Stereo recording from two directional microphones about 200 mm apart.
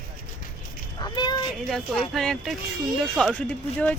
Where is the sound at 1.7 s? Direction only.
Centre (ahead or behind).